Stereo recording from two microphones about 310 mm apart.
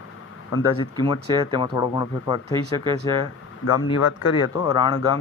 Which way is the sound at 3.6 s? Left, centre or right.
Left.